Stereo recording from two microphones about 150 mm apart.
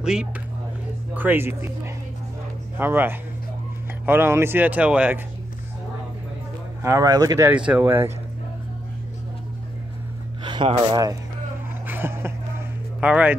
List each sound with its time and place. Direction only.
0.0 s speech: 5° right (ahead or behind)
2.8 s speech: 15° right (ahead or behind)
6.8 s speech: 20° right (ahead or behind)
7.4 s speech: 5° right (ahead or behind)
10.4 s speech: 30° right (ahead or behind)
11.9 s a sound: 15° right (ahead or behind)
13.0 s speech: 10° right (ahead or behind)